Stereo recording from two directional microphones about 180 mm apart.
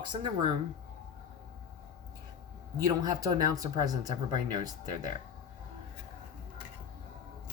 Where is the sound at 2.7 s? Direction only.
20° right (ahead or behind).